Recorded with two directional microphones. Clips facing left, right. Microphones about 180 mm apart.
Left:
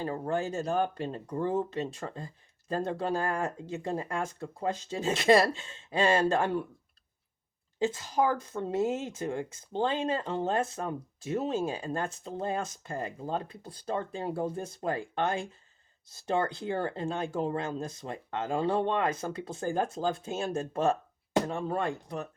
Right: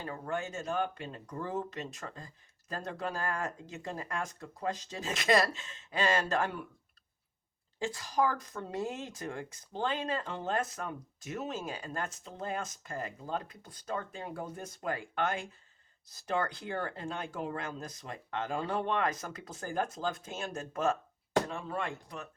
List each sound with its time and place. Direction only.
0.0 s speech: 30° left (ahead or behind)
7.8 s speech: 25° left (ahead or behind)